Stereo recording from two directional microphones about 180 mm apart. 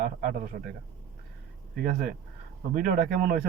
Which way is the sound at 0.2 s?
50° right (ahead or behind).